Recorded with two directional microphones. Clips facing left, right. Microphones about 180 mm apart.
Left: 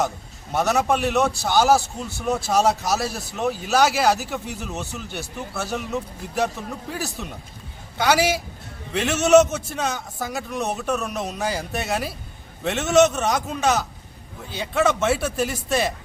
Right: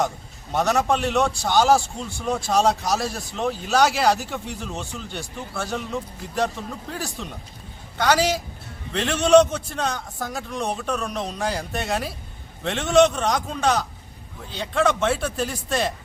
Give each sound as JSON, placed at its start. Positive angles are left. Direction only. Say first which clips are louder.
{"t": 0.5, "sound": "a man's voice", "louder": "even", "side_deg": 5}